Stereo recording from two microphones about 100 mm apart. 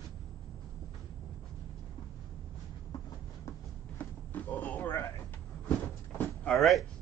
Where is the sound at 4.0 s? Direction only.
15° left (ahead or behind).